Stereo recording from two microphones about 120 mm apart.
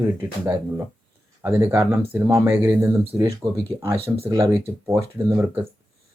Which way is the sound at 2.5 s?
15° right (ahead or behind).